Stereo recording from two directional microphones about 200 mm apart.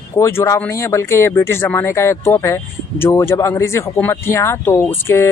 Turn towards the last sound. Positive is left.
turn(degrees=10)  # may be behind; listen again after turning